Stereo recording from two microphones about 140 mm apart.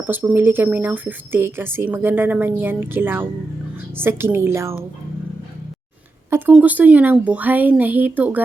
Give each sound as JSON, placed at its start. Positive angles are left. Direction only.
{"t": 0.0, "sound": "speech", "side_deg": -15}
{"t": 6.5, "sound": "speech", "side_deg": -10}